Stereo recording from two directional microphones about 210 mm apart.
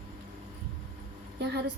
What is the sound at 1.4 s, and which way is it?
Speech, 55° right (ahead or behind).